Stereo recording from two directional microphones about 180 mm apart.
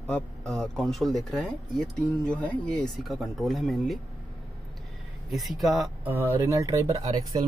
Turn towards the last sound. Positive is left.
turn(degrees=-20)  # may be behind; listen again after turning